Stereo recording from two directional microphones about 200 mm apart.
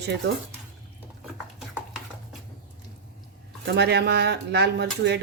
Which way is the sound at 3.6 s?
55° right (ahead or behind).